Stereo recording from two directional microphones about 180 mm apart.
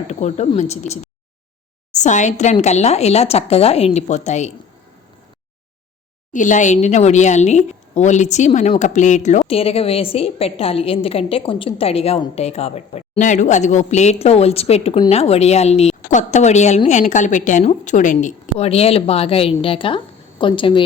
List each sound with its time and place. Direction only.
0.1 s a woman's voice: 40° left (ahead or behind)
6.3 s a woman's voice: 45° left (ahead or behind); by 20.8 s 25° left (ahead or behind)